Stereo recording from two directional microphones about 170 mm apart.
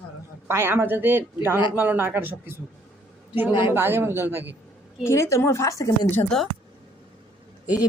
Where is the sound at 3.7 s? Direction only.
15° right (ahead or behind).